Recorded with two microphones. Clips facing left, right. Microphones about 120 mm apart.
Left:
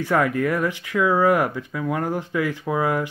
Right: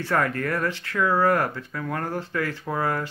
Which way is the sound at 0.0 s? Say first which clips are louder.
Left 4 dB; 10° left (ahead or behind).